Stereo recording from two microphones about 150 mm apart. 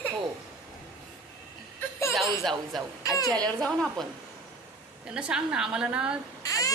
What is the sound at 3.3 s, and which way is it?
Speech, 25° right (ahead or behind).